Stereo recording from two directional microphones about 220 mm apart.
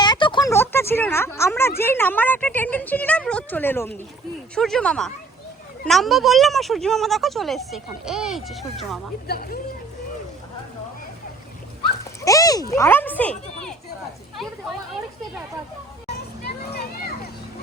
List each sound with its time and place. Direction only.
0.0 s a sound: 20° left (ahead or behind)
1.8 s speech: 10° left (ahead or behind)
9.2 s speech: 45° left (ahead or behind)
12.2 s speech: 15° left (ahead or behind)
16.1 s children playing: 45° left (ahead or behind)